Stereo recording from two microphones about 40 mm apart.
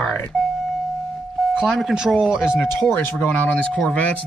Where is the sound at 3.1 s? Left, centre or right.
Left.